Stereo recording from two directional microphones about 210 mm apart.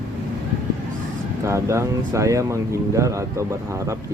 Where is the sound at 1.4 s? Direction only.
15° right (ahead or behind).